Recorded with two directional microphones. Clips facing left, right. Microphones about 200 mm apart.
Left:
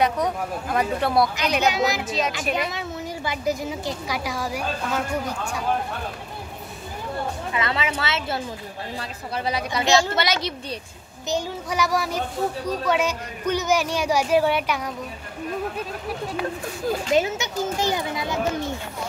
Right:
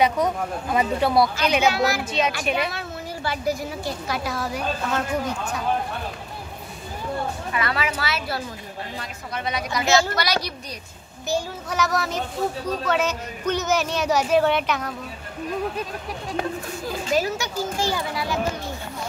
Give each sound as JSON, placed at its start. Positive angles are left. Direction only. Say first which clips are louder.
{"t": 0.0, "sound": "speech", "louder": "right 1 dB", "side_deg": 0}
{"t": 1.7, "sound": "a child's voice", "louder": "right 1 dB", "side_deg": 20}
{"t": 2.0, "sound": "speech", "louder": "right 1 dB", "side_deg": 0}
{"t": 2.7, "sound": "a woman's voice", "louder": "left 2 dB", "side_deg": 20}
{"t": 7.5, "sound": "a child's voice", "louder": "even", "side_deg": 25}
{"t": 17.0, "sound": "a child's voice", "louder": "even", "side_deg": 20}